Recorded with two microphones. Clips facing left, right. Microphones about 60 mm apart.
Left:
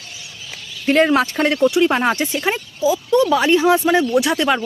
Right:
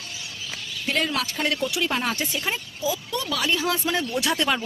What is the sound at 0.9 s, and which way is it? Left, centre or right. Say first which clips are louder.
Speech: left 11 dB; left.